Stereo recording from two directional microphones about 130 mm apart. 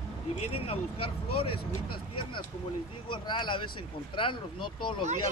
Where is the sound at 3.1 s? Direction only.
35° left (ahead or behind).